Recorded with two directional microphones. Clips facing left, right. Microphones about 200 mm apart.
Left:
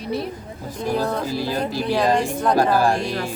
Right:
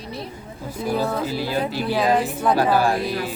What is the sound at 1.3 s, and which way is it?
Speech, 45° left (ahead or behind).